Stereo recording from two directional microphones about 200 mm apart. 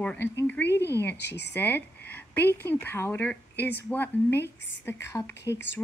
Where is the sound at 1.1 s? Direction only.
55° left (ahead or behind).